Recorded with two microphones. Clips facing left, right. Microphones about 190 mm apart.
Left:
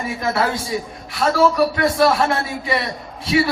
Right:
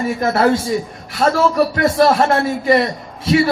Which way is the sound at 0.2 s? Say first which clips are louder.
Right 6 dB; 50° right (ahead or behind).